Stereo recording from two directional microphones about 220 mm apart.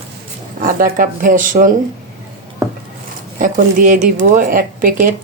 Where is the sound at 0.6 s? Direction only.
40° right (ahead or behind).